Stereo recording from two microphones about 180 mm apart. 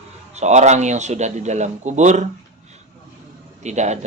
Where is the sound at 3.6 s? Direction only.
40° right (ahead or behind).